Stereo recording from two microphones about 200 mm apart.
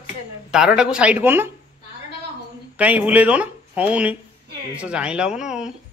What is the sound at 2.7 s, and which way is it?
Speech, 5° right (ahead or behind).